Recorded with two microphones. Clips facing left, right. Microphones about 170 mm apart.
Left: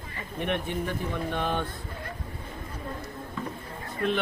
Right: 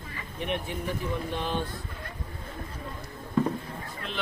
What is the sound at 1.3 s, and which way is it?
Speech, 55° left (ahead or behind).